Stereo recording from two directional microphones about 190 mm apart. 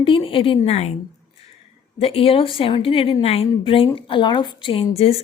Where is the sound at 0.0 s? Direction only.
25° left (ahead or behind).